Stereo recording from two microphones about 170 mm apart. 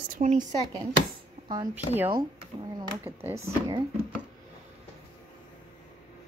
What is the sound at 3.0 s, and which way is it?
Speech, 15° right (ahead or behind).